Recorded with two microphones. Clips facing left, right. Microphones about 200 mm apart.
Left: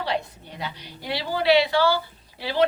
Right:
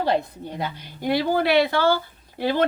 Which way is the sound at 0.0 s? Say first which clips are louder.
Right 5 dB; 50° right (ahead or behind).